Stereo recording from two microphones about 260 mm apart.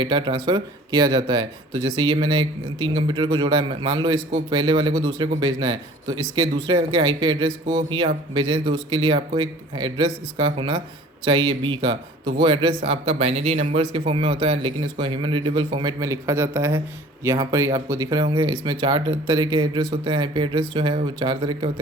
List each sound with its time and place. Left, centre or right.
0.0 s a man's voice: centre